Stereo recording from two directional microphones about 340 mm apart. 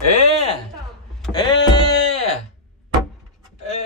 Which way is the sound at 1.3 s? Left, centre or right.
Centre.